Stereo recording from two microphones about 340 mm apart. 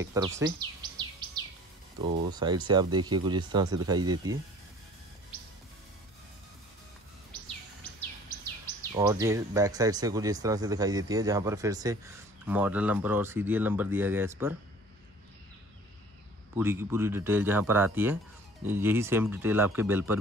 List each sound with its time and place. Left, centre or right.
0.0 s speech: centre
1.2 s bird vocalization: centre
2.0 s speech: centre
8.9 s speech: centre
16.5 s speech: centre